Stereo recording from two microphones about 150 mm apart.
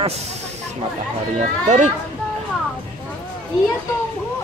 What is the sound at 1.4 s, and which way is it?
Speech, 50° right (ahead or behind).